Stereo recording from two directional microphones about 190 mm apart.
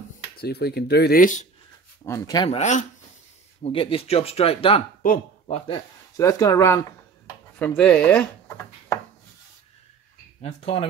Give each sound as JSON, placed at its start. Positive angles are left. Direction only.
{"t": 0.4, "sound": "speech", "side_deg": 55}
{"t": 2.0, "sound": "speech", "side_deg": 15}
{"t": 2.5, "sound": "speech", "side_deg": 40}
{"t": 3.6, "sound": "speech", "side_deg": 30}
{"t": 5.0, "sound": "a sound", "side_deg": 45}
{"t": 6.1, "sound": "speech", "side_deg": 15}
{"t": 7.5, "sound": "speech", "side_deg": 5}
{"t": 10.4, "sound": "speech", "side_deg": 30}